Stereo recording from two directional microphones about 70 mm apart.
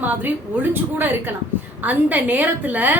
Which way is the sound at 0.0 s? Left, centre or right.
Right.